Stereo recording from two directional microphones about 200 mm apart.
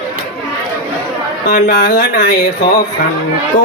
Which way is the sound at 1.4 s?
50° left (ahead or behind).